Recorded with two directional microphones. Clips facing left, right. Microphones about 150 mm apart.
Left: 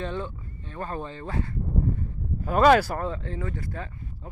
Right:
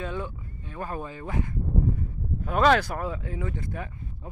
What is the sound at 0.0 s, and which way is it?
Speech, 10° right (ahead or behind).